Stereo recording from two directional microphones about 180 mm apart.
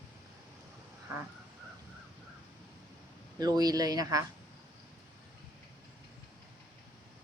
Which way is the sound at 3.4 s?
20° right (ahead or behind).